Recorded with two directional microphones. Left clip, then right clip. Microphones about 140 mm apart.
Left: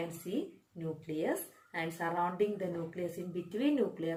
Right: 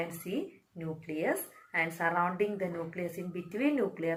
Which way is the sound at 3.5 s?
20° left (ahead or behind).